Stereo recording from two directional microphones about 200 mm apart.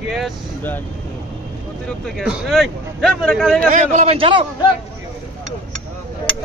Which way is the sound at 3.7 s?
35° right (ahead or behind).